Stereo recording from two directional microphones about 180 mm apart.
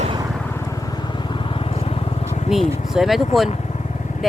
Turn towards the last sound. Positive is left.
turn(degrees=0)  # may be behind; listen again after turning